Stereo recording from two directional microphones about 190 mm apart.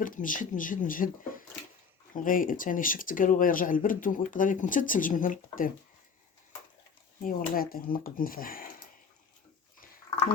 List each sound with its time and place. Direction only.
0.0 s speech: 45° left (ahead or behind)
7.3 s speech: 50° left (ahead or behind)